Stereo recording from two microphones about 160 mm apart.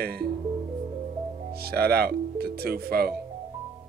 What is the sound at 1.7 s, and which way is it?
Speech, 75° right (ahead or behind).